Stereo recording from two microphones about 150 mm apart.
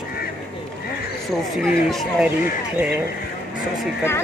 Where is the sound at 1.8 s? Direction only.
Centre (ahead or behind).